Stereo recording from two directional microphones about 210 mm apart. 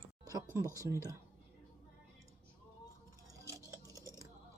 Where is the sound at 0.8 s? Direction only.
15° right (ahead or behind).